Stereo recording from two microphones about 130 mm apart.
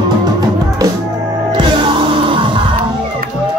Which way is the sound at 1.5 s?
35° right (ahead or behind).